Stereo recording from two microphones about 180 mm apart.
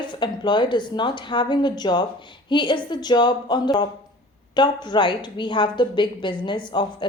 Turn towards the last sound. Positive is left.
turn(degrees=25)  # may be behind; listen again after turning